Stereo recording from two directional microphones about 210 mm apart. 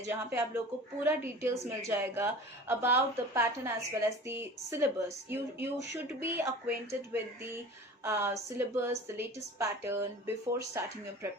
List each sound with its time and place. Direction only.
0.1 s speech: 10° right (ahead or behind)